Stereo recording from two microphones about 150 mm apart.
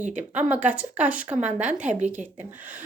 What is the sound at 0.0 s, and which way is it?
Speech, 55° right (ahead or behind).